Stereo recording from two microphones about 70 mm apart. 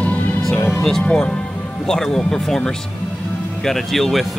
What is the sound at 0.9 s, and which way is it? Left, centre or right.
Speech, centre.